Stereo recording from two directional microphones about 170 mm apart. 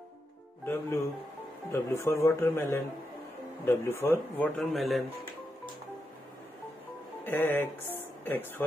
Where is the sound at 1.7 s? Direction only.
15° left (ahead or behind); by 5.0 s centre (ahead or behind).